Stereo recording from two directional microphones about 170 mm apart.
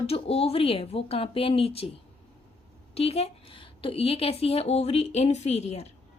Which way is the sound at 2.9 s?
35° left (ahead or behind).